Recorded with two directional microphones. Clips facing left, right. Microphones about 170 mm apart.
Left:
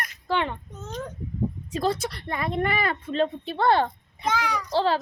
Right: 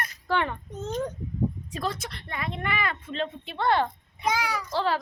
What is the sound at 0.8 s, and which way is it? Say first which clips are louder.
Speech: right 8 dB; 20° right (ahead or behind).